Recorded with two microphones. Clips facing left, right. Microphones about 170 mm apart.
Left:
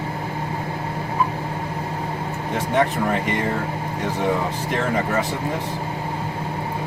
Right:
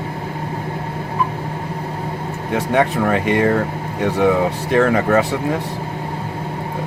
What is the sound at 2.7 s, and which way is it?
Speech, 70° right (ahead or behind).